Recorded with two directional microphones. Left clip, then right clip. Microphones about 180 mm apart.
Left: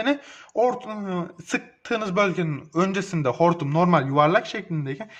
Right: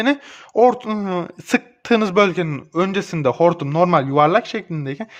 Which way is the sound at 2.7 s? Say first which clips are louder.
Right 4 dB; 30° right (ahead or behind).